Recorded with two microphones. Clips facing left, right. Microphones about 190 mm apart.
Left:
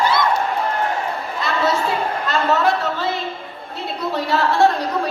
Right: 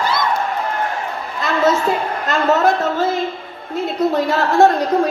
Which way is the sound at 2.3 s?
45° right (ahead or behind).